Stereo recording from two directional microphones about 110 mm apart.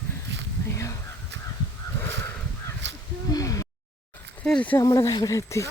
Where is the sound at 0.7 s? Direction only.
25° left (ahead or behind).